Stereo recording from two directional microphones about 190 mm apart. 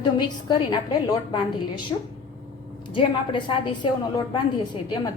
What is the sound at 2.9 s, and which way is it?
A woman's voice, 25° left (ahead or behind).